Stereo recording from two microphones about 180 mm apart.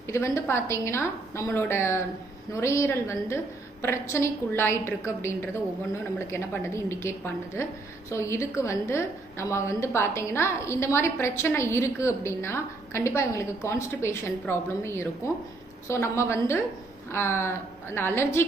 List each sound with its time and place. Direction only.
0.1 s a woman's voice: 15° left (ahead or behind)